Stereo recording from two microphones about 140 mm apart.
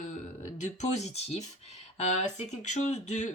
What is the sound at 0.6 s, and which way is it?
A woman's voice, 55° left (ahead or behind).